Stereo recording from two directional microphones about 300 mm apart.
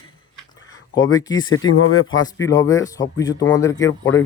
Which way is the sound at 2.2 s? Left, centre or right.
Centre.